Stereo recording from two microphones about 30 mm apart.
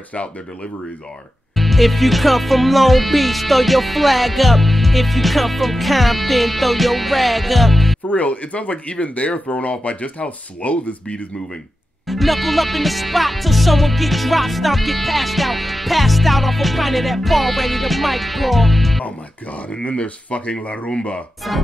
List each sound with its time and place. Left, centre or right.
1.5 s music: centre
8.1 s speech: left
12.1 s music: centre
19.8 s speech: left